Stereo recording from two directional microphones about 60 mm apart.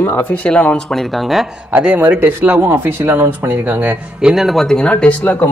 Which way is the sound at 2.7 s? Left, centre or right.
Right.